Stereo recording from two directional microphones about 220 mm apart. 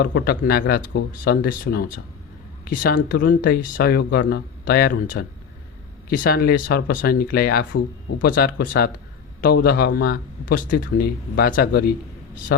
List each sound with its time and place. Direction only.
0.0 s speech: 45° left (ahead or behind)